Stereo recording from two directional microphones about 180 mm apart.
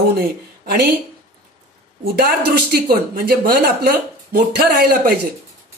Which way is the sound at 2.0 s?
60° right (ahead or behind).